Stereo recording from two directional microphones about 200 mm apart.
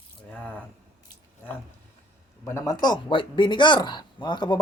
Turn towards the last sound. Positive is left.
turn(degrees=20)  # may be behind; listen again after turning